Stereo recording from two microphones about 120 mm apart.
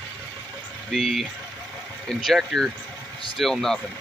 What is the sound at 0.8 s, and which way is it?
Speech, centre (ahead or behind).